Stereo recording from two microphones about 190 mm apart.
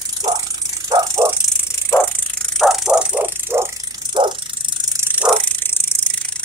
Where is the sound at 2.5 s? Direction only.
Centre (ahead or behind).